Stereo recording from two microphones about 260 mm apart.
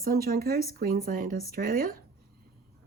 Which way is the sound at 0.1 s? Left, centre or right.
Right.